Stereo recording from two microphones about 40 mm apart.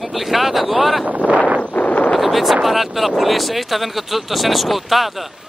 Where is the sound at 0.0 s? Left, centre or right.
Centre.